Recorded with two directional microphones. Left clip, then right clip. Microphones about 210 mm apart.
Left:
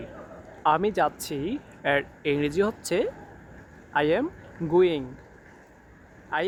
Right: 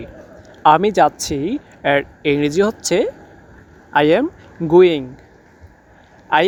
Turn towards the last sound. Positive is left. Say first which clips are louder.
# right 13 dB
turn(degrees=-40)  # may be behind; listen again after turning